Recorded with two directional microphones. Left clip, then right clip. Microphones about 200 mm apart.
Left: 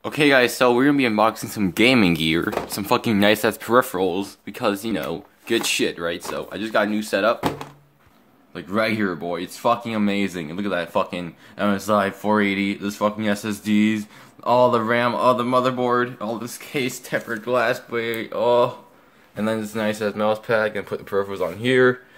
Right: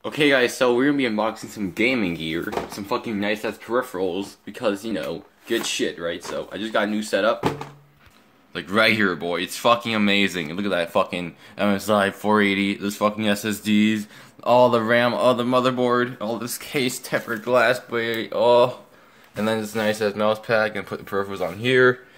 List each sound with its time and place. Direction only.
0.0 s speech: 25° left (ahead or behind); by 4.0 s 55° left (ahead or behind)
4.0 s speech: 30° left (ahead or behind)
8.5 s speech: 5° right (ahead or behind)